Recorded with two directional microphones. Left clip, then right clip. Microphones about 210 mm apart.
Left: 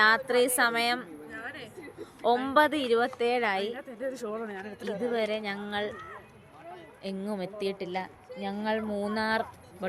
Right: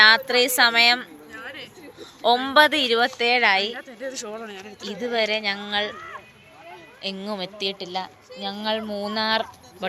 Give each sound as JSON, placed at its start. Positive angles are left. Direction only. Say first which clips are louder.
{"t": 0.0, "sound": "speech", "louder": "right 7 dB", "side_deg": 5}
{"t": 1.3, "sound": "a sound", "louder": "right 2 dB", "side_deg": 55}
{"t": 2.0, "sound": "speech", "louder": "right 6 dB", "side_deg": 5}
{"t": 3.8, "sound": "a woman's voice", "louder": "right 2 dB", "side_deg": 15}
{"t": 4.1, "sound": "speech", "louder": "right 2 dB", "side_deg": 25}
{"t": 4.8, "sound": "speech", "louder": "right 6 dB", "side_deg": 0}
{"t": 7.0, "sound": "a woman's voice", "louder": "right 6 dB", "side_deg": 5}